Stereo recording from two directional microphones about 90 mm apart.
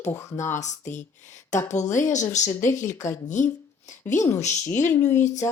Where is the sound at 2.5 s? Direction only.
30° left (ahead or behind).